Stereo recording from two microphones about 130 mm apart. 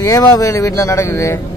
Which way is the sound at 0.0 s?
25° left (ahead or behind).